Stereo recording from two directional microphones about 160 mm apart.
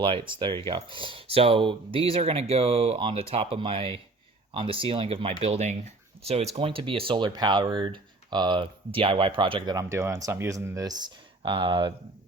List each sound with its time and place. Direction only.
0.0 s speech: 30° right (ahead or behind)